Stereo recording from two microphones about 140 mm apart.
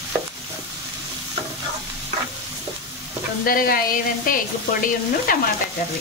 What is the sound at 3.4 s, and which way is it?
Speech, 90° left.